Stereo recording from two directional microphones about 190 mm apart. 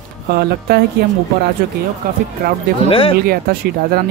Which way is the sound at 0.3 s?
55° right (ahead or behind).